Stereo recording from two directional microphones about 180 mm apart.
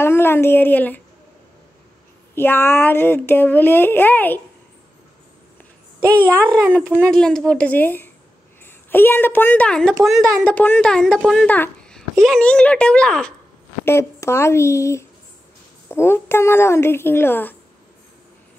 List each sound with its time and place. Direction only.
0.0 s speech: 15° left (ahead or behind)
2.3 s speech: 15° left (ahead or behind)
6.1 s a child's voice: 10° left (ahead or behind)
13.8 s speech: 15° left (ahead or behind)